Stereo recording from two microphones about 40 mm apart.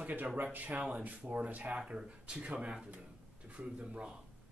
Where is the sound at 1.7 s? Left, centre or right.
Right.